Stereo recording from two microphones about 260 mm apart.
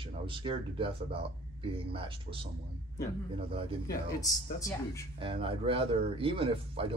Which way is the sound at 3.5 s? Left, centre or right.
Right.